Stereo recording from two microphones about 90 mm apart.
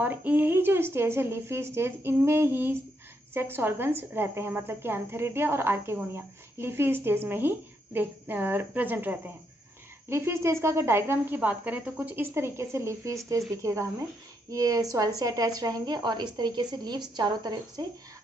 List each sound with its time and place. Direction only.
0.0 s a woman's voice: 20° right (ahead or behind); by 17.8 s 50° right (ahead or behind)